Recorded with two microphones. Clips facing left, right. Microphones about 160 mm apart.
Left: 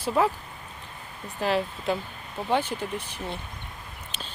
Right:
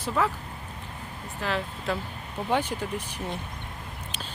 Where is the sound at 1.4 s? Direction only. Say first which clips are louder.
Left 5 dB; 15° left (ahead or behind).